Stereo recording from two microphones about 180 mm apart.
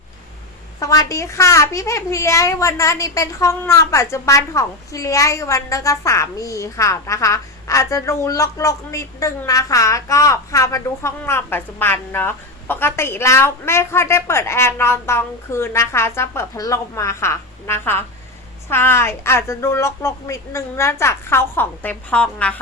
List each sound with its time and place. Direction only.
0.8 s a child's voice: 20° left (ahead or behind)